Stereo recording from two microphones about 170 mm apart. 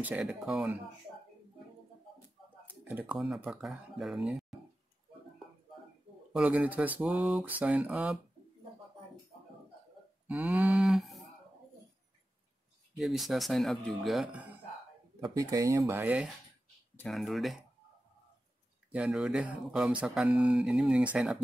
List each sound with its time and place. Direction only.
0.0 s speech: 5° right (ahead or behind)
2.8 s speech: 10° right (ahead or behind)
6.3 s speech: 5° right (ahead or behind)
10.2 s cattle: 10° right (ahead or behind)
12.9 s speech: centre (ahead or behind)
15.3 s speech: 20° right (ahead or behind)
16.9 s speech: 5° left (ahead or behind)
18.9 s speech: 5° right (ahead or behind)